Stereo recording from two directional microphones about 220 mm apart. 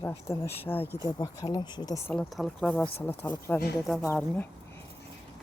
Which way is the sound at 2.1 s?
Centre (ahead or behind).